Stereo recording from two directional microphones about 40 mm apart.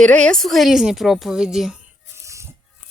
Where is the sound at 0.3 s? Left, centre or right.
Centre.